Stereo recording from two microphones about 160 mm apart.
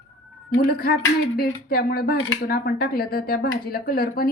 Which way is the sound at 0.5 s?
65° left (ahead or behind).